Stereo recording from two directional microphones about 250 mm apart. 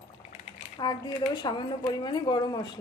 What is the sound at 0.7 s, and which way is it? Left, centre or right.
Speech, centre.